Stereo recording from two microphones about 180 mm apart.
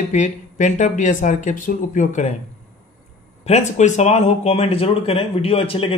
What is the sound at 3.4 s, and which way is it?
Speech, 40° left (ahead or behind).